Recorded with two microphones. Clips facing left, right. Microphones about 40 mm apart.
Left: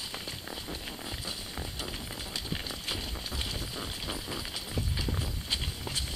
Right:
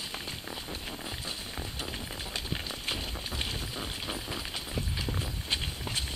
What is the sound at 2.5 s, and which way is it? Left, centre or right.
Clip-clop, centre.